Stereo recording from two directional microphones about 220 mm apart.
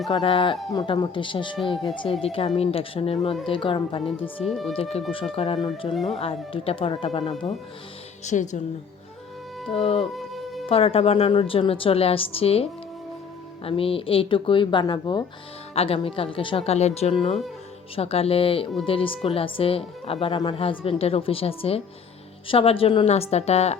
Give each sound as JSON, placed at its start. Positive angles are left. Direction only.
{"t": 0.1, "sound": "speech", "side_deg": 25}
{"t": 4.4, "sound": "speech", "side_deg": 0}
{"t": 4.7, "sound": "speech", "side_deg": 25}
{"t": 5.9, "sound": "speech", "side_deg": 0}
{"t": 6.1, "sound": "speech", "side_deg": 25}
{"t": 9.8, "sound": "speech", "side_deg": 25}
{"t": 10.2, "sound": "music", "side_deg": 0}
{"t": 10.7, "sound": "speech", "side_deg": 25}
{"t": 13.7, "sound": "speech", "side_deg": 25}